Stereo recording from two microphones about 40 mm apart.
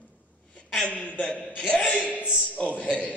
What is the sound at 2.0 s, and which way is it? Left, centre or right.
Speech, left.